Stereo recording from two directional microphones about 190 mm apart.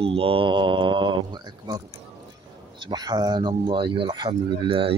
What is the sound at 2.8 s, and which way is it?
Speech, 20° right (ahead or behind).